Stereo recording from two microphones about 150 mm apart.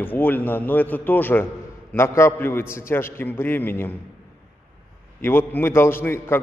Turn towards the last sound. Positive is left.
turn(degrees=15)  # may be behind; listen again after turning